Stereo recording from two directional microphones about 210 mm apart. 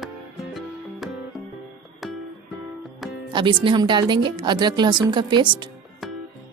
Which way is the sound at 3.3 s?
20° right (ahead or behind).